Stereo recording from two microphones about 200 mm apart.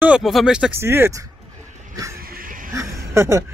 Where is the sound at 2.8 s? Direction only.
15° right (ahead or behind).